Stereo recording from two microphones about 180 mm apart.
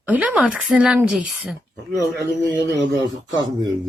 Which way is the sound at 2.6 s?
75° right (ahead or behind).